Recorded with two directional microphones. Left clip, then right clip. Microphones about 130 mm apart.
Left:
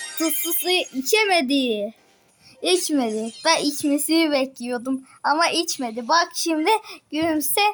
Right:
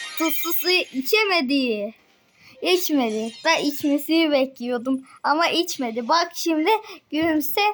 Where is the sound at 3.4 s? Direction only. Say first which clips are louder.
Left 1 dB; centre (ahead or behind).